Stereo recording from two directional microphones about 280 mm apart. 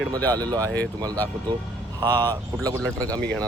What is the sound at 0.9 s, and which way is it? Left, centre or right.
Speech, centre.